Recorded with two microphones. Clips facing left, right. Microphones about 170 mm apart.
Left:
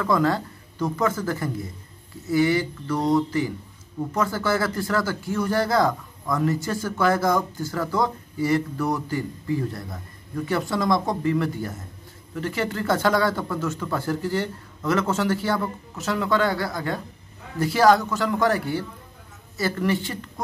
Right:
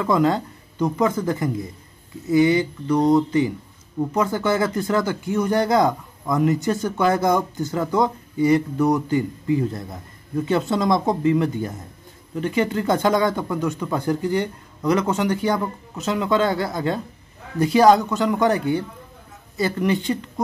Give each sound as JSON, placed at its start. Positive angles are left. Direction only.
{"t": 0.0, "sound": "speech", "side_deg": -20}